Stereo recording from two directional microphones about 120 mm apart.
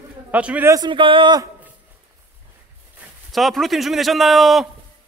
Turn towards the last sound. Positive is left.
turn(degrees=0)  # may be behind; listen again after turning